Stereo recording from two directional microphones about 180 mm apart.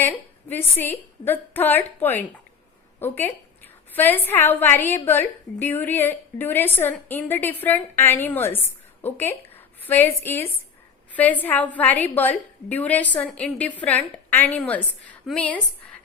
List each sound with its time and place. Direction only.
0.0 s a woman's voice: 10° left (ahead or behind)